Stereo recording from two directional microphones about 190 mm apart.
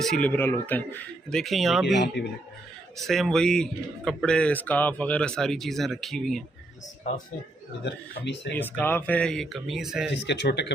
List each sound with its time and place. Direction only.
0.0 s speech: 5° left (ahead or behind)
3.1 s speech: centre (ahead or behind)
7.9 s speech: 65° left (ahead or behind)
8.5 s speech: 10° left (ahead or behind)
10.2 s speech: 65° left (ahead or behind)